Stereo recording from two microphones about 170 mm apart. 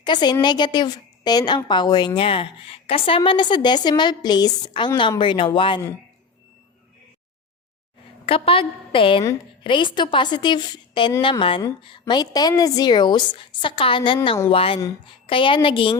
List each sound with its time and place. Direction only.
0.0 s a woman's voice: 25° left (ahead or behind)
8.3 s a woman's voice: 35° left (ahead or behind)